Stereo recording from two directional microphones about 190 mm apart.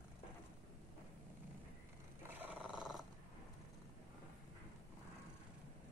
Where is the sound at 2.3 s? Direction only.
10° right (ahead or behind).